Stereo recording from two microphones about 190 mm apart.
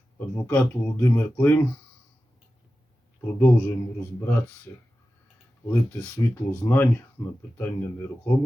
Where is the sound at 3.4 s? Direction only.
10° left (ahead or behind).